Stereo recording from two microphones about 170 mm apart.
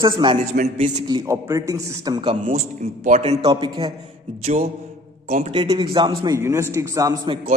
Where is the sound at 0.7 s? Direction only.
40° right (ahead or behind).